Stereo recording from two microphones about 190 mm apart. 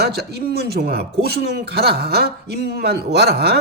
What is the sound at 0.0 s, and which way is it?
A man's voice, 55° right (ahead or behind).